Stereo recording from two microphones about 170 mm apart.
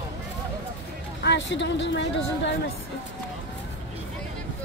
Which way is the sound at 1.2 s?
90° left.